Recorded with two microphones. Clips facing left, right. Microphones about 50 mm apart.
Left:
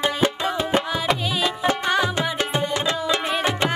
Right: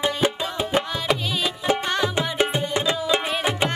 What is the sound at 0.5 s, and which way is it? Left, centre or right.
Music, centre.